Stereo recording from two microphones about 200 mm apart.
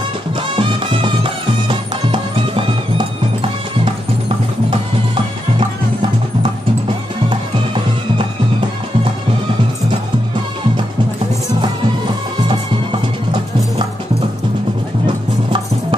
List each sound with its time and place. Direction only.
0.4 s music: 25° right (ahead or behind)
7.2 s music: 25° right (ahead or behind)
15.0 s music: 25° right (ahead or behind)